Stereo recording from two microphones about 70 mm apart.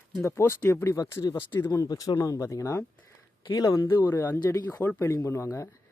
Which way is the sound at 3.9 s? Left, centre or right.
Left.